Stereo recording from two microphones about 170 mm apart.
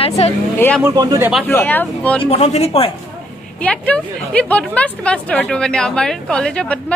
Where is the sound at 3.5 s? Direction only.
10° left (ahead or behind).